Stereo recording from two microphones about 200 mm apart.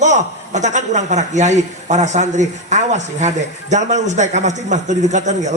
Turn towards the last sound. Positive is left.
turn(degrees=-35)  # may be behind; listen again after turning